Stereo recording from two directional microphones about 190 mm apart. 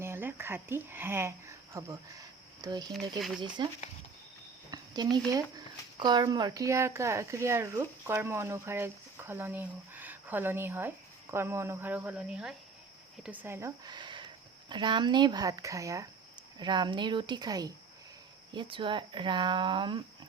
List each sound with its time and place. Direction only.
0.0 s speech: 10° right (ahead or behind)
2.9 s speech: centre (ahead or behind)
4.7 s cricket: 20° right (ahead or behind)
6.0 s speech: 25° right (ahead or behind)